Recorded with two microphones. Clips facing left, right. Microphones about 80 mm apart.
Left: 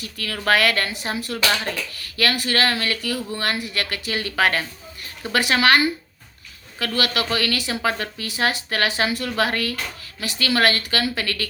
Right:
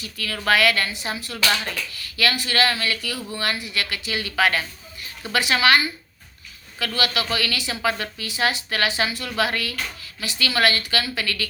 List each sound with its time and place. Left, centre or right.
0.0 s a woman's voice: left